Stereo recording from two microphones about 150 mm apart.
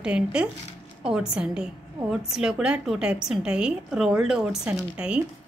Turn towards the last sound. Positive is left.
turn(degrees=-5)  # may be behind; listen again after turning